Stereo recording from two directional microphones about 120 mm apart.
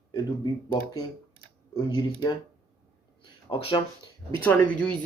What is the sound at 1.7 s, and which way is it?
Speech, 40° left (ahead or behind).